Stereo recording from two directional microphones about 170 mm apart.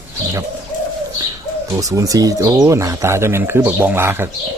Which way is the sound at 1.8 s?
20° right (ahead or behind).